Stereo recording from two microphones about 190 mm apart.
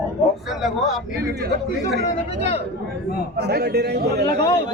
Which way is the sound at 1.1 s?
50° right (ahead or behind).